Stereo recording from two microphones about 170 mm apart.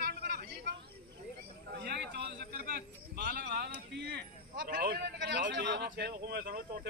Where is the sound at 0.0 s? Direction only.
70° right (ahead or behind).